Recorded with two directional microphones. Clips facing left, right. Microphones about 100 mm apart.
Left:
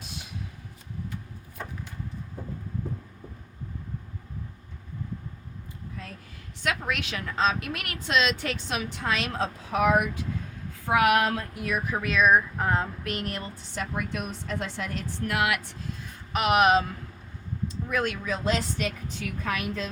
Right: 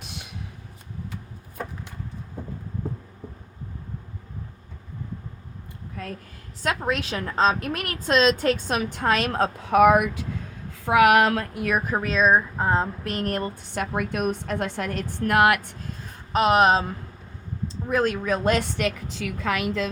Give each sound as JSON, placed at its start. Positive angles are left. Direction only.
{"t": 6.0, "sound": "a sound", "side_deg": -55}
{"t": 6.6, "sound": "speech", "side_deg": -35}
{"t": 10.8, "sound": "a woman's voice", "side_deg": -85}
{"t": 11.5, "sound": "speech", "side_deg": -55}
{"t": 11.9, "sound": "a woman's voice", "side_deg": -35}